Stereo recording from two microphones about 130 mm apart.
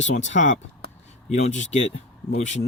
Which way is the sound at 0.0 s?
65° left (ahead or behind).